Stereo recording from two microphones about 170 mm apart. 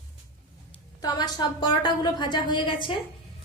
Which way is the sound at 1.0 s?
25° left (ahead or behind).